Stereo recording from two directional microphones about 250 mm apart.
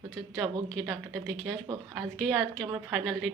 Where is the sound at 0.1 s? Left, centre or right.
Centre.